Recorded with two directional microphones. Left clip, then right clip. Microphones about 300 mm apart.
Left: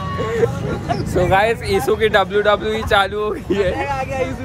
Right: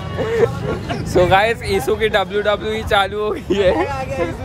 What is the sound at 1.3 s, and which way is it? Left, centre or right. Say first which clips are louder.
Speech: right 1 dB; centre.